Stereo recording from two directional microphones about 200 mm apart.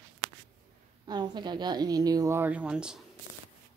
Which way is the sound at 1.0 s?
20° right (ahead or behind).